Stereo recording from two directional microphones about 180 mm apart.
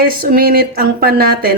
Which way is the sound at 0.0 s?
55° right (ahead or behind).